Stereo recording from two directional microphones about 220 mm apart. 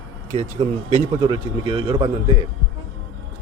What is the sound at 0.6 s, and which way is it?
A man's voice, 20° right (ahead or behind).